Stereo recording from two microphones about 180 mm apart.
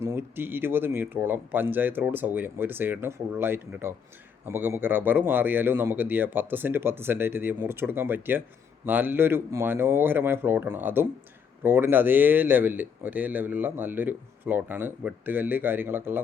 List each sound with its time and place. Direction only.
0.0 s speech: 15° right (ahead or behind)